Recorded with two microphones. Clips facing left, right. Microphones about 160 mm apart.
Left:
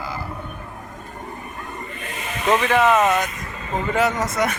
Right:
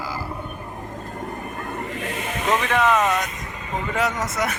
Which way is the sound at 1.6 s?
70° right (ahead or behind).